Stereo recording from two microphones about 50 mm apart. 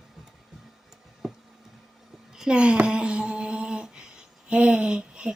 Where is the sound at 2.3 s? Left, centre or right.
Centre.